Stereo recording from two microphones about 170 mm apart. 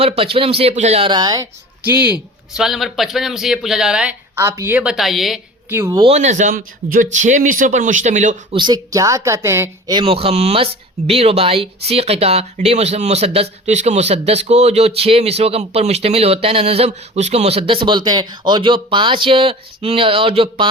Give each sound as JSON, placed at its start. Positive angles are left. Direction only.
{"t": 0.2, "sound": "speech", "side_deg": -35}
{"t": 1.9, "sound": "speech", "side_deg": -10}
{"t": 4.4, "sound": "speech", "side_deg": -15}
{"t": 5.6, "sound": "speech", "side_deg": -15}
{"t": 6.0, "sound": "a man's voice", "side_deg": -40}
{"t": 8.5, "sound": "speech", "side_deg": -25}